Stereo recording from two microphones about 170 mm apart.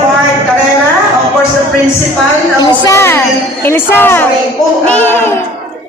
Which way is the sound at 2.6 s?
20° left (ahead or behind).